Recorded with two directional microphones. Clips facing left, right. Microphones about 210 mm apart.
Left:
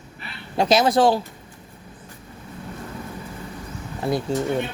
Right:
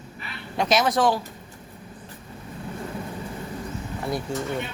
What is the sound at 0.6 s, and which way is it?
Speech, 30° left (ahead or behind).